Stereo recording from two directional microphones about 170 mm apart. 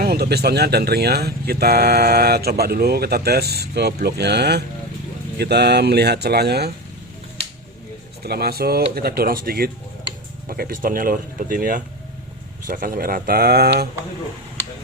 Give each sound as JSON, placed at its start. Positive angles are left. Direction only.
{"t": 0.0, "sound": "speech", "side_deg": -70}
{"t": 8.2, "sound": "speech", "side_deg": -65}